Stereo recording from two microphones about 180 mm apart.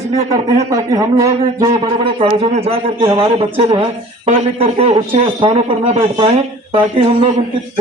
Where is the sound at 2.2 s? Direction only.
35° right (ahead or behind).